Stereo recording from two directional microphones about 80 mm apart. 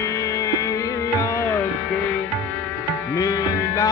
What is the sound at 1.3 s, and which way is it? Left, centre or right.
Music, left.